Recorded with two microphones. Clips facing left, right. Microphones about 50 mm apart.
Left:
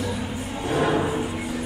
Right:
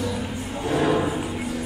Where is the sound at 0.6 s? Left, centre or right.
Centre.